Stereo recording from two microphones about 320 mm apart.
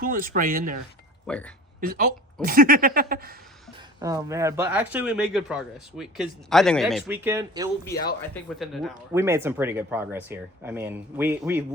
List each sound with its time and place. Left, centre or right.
0.0 s speech: right
1.3 s speech: centre
1.8 s speech: right
3.8 s speech: centre
8.2 s speech: centre